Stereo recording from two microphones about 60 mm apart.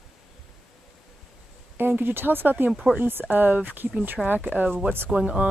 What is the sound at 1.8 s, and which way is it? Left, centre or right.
Speech, right.